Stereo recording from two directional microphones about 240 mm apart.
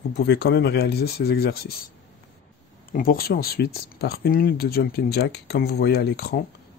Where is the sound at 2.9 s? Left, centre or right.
Left.